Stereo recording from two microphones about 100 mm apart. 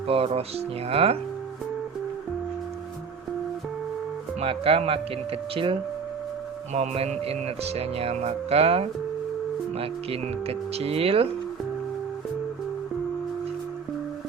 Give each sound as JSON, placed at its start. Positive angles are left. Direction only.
{"t": 0.1, "sound": "speech", "side_deg": -75}
{"t": 4.4, "sound": "speech", "side_deg": -70}
{"t": 6.7, "sound": "speech", "side_deg": -85}